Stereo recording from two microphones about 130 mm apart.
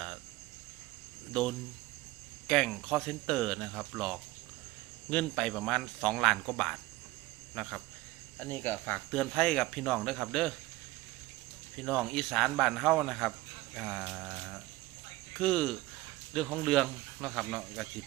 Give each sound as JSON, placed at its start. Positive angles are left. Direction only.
{"t": 1.3, "sound": "speech", "side_deg": 5}
{"t": 8.4, "sound": "speech", "side_deg": 15}
{"t": 9.1, "sound": "speech", "side_deg": 0}
{"t": 11.8, "sound": "speech", "side_deg": 5}
{"t": 13.7, "sound": "a sound", "side_deg": 0}
{"t": 15.4, "sound": "speech", "side_deg": 5}